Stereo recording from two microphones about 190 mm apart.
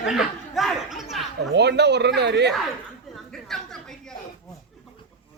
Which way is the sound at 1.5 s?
65° right (ahead or behind).